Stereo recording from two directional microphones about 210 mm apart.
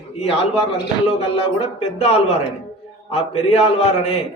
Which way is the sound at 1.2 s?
30° left (ahead or behind).